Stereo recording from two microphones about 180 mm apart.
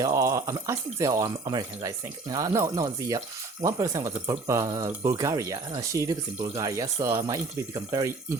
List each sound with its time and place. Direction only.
0.0 s speech: 20° right (ahead or behind)